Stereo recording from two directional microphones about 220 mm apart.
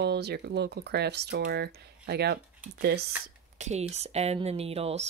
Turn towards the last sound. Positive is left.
turn(degrees=-30)  # may be behind; listen again after turning